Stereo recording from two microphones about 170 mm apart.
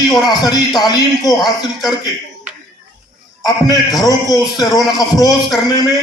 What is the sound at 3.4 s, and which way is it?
A man's voice, 20° left (ahead or behind).